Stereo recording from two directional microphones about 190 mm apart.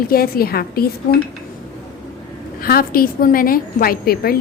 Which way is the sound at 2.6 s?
50° left (ahead or behind).